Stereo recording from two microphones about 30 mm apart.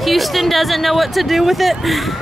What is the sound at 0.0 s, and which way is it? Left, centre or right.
Speech, centre.